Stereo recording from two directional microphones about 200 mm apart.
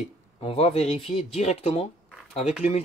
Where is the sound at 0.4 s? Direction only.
30° left (ahead or behind).